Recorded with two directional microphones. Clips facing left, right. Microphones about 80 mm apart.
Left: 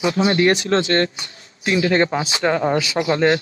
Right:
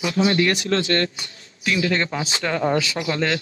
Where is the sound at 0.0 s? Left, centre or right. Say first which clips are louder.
Left 3 dB; left.